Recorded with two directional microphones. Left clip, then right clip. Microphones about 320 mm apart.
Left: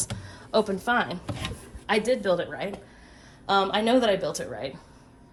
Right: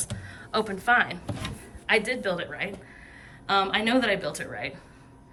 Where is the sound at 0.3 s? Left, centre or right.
Centre.